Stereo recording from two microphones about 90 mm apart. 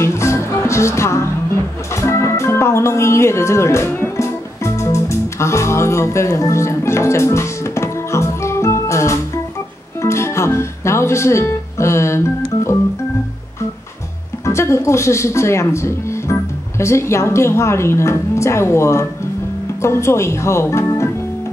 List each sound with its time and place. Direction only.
0.0 s music: 30° left (ahead or behind)
14.4 s speech: 30° left (ahead or behind)